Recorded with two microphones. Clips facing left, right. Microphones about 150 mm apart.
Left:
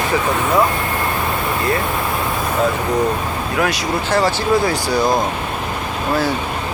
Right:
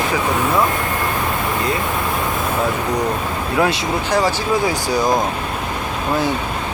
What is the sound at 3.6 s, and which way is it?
Speech, 25° right (ahead or behind).